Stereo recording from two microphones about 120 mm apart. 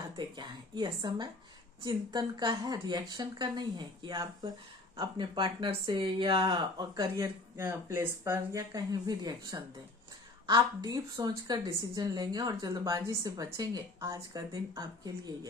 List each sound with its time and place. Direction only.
0.2 s a woman's voice: 40° right (ahead or behind)
7.5 s a woman's voice: 20° right (ahead or behind)